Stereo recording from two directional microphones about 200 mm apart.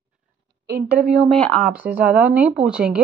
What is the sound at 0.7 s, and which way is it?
Speech, 50° right (ahead or behind).